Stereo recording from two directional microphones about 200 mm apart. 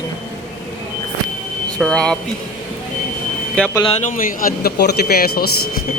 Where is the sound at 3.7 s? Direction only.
20° left (ahead or behind).